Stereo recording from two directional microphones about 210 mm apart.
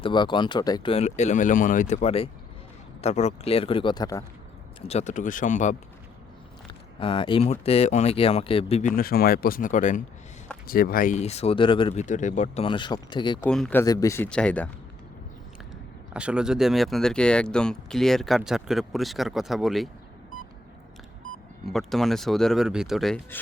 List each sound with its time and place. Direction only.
0.0 s speech: 20° left (ahead or behind)
4.8 s speech: 30° left (ahead or behind)
7.0 s speech: 25° left (ahead or behind)
13.4 s speech: 5° left (ahead or behind)
13.8 s speech: 15° left (ahead or behind)
16.1 s speech: 5° right (ahead or behind)
21.7 s speech: centre (ahead or behind)